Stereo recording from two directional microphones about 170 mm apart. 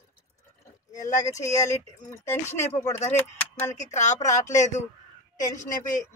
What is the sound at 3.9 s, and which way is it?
Speech, 45° left (ahead or behind).